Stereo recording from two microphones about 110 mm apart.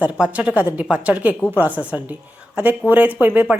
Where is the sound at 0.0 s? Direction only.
15° right (ahead or behind).